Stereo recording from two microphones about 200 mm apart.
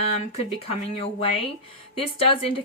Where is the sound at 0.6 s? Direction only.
30° left (ahead or behind).